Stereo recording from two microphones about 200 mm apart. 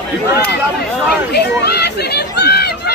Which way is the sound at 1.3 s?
55° left (ahead or behind).